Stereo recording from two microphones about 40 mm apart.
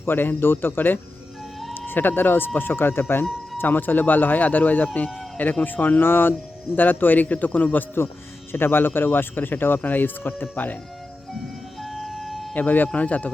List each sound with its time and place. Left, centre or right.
0.0 s speech: left
3.6 s speech: left
6.1 s speech: left
6.7 s speech: left
8.5 s speech: left
11.8 s vehicle: centre
12.5 s speech: left
12.9 s speech: left